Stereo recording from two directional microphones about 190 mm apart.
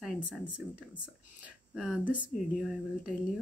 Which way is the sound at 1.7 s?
5° right (ahead or behind).